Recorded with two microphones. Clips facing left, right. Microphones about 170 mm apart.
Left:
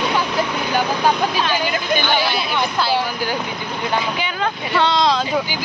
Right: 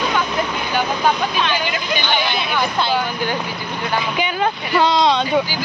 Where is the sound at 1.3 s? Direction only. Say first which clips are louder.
Left 1 dB; 40° left (ahead or behind).